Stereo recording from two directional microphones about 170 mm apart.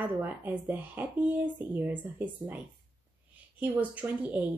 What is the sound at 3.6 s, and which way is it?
Speech, 10° right (ahead or behind).